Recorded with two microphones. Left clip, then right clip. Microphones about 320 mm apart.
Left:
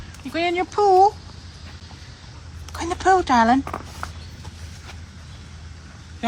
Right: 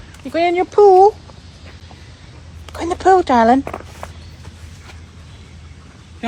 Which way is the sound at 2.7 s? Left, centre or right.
Centre.